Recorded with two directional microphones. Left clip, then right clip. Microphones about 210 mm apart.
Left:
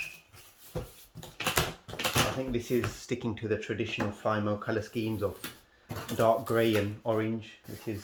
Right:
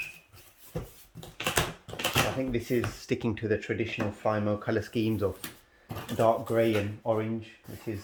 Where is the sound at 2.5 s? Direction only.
25° right (ahead or behind).